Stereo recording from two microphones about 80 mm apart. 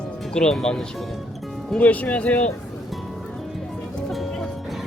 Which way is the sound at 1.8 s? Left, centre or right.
Centre.